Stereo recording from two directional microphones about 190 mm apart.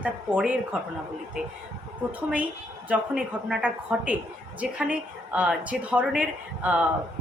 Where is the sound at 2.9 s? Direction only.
5° right (ahead or behind).